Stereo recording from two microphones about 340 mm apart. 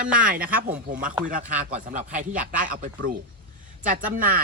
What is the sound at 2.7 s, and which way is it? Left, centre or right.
Speech, right.